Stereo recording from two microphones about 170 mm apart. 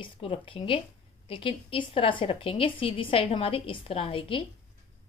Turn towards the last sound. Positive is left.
turn(degrees=30)  # may be behind; listen again after turning